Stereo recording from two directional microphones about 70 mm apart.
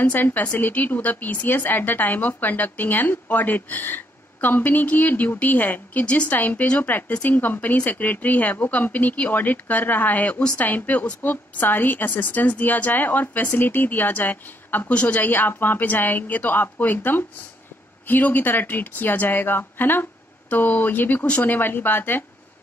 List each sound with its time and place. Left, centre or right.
0.0 s a woman's voice: left
15.2 s a woman's voice: left